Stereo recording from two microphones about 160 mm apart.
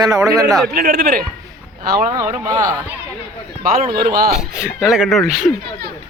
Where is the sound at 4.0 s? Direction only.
65° right (ahead or behind).